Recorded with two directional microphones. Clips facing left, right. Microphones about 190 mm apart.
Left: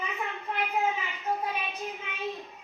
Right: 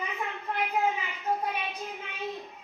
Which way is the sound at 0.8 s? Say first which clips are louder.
Right 1 dB; 15° right (ahead or behind).